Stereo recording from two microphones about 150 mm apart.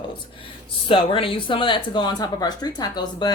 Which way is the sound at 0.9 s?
35° left (ahead or behind).